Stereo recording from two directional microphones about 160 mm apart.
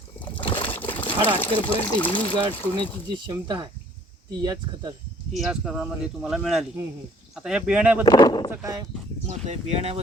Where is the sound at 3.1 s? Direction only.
30° right (ahead or behind).